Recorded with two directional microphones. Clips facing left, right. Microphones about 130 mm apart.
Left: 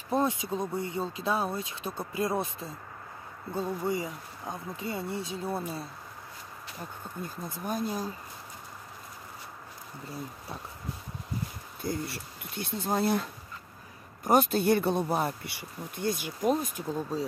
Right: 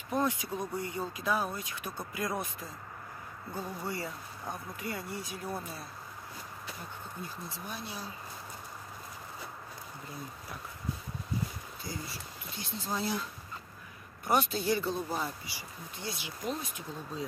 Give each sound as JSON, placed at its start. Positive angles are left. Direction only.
{"t": 0.1, "sound": "speech", "side_deg": 20}
{"t": 7.2, "sound": "speech", "side_deg": 50}
{"t": 11.8, "sound": "speech", "side_deg": 55}